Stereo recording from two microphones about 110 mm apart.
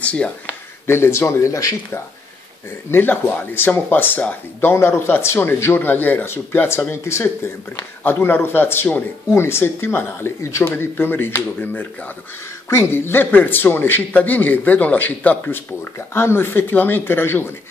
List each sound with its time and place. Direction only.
0.0 s speech: 10° left (ahead or behind)
0.8 s a man's voice: 25° left (ahead or behind)